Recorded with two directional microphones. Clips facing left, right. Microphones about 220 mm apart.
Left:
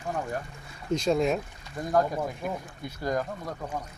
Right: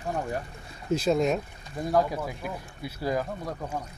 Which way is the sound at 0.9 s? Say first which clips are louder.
Right 1 dB; 5° right (ahead or behind).